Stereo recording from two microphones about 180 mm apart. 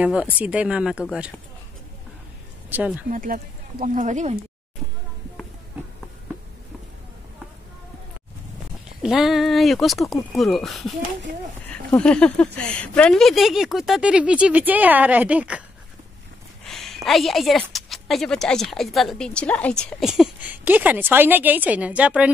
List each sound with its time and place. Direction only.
0.0 s a woman's voice: 5° right (ahead or behind)
2.7 s speech: 10° right (ahead or behind)
3.1 s speech: 50° right (ahead or behind)
9.0 s a woman's voice: centre (ahead or behind)
11.9 s a sound: 5° left (ahead or behind)
12.5 s a woman's voice: 5° left (ahead or behind)
16.6 s a woman's voice: centre (ahead or behind)